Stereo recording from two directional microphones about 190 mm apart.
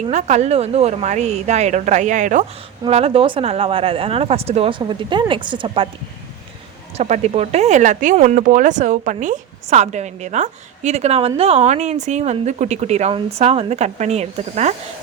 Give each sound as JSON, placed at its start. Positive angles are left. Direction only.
{"t": 0.0, "sound": "speech", "side_deg": -35}
{"t": 6.9, "sound": "speech", "side_deg": -35}